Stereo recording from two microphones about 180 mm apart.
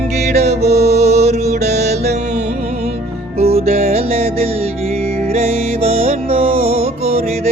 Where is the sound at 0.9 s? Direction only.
35° right (ahead or behind).